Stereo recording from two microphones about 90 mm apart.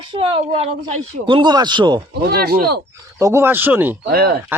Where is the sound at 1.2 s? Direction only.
60° right (ahead or behind).